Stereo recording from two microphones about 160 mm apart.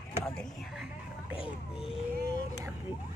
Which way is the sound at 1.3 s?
35° left (ahead or behind).